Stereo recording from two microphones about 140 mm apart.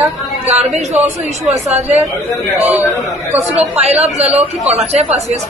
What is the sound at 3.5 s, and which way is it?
A woman's voice, 50° right (ahead or behind).